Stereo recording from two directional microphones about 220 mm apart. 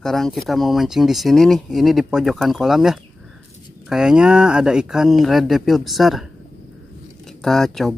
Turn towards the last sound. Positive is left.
turn(degrees=0)  # may be behind; listen again after turning